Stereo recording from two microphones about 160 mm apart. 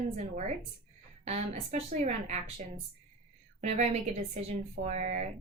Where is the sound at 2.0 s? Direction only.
45° right (ahead or behind).